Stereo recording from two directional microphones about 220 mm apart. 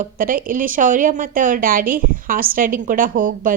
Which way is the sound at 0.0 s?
40° right (ahead or behind).